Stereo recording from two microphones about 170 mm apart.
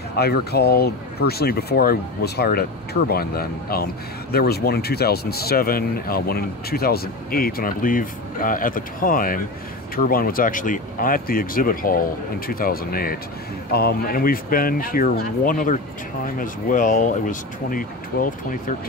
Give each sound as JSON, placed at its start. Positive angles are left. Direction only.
{"t": 0.1, "sound": "speech", "side_deg": 70}